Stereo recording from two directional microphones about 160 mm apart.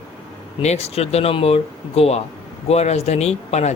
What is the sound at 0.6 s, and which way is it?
A man's voice, 40° left (ahead or behind).